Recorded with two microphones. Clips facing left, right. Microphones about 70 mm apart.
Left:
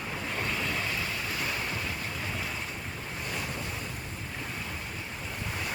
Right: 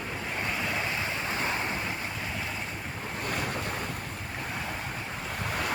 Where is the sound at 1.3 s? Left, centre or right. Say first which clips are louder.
Right 3 dB; right.